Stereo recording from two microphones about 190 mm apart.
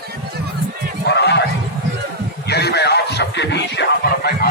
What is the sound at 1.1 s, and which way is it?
Neigh, 65° left (ahead or behind).